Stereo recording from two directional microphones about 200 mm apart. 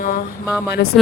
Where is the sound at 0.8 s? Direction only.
55° left (ahead or behind).